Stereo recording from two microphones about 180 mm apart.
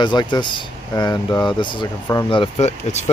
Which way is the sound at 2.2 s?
30° left (ahead or behind).